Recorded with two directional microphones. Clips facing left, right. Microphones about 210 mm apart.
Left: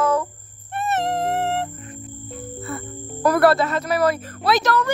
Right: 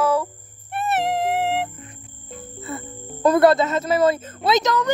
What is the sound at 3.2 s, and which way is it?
A woman's voice, 20° right (ahead or behind).